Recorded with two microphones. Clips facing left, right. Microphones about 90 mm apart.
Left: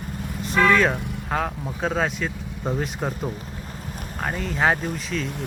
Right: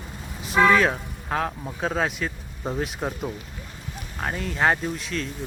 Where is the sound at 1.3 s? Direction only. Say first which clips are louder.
Even; centre (ahead or behind).